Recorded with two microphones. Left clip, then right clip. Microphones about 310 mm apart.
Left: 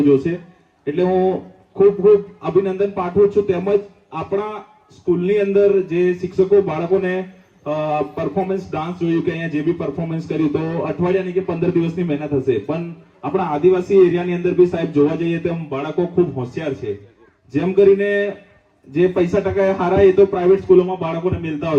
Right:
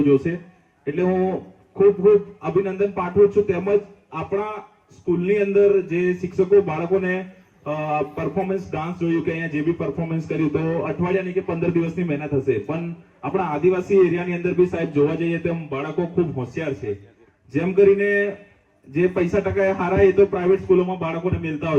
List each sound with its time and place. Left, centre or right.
0.0 s a man's voice: left